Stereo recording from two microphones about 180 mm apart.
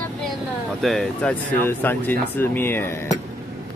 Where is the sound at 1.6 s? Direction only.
10° left (ahead or behind).